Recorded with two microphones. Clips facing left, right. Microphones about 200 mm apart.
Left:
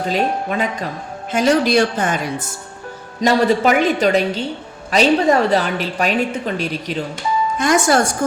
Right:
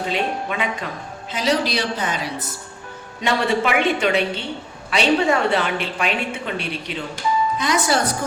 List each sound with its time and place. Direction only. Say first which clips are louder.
0.0 s a woman's voice: left 4 dB; 40° left (ahead or behind)
3.2 s a woman's voice: left 6 dB; 40° left (ahead or behind)